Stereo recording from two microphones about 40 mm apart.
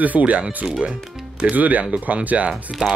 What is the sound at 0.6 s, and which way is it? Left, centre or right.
Speech, centre.